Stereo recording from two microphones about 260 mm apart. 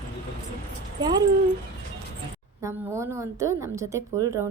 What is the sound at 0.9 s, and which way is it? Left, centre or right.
Speech, centre.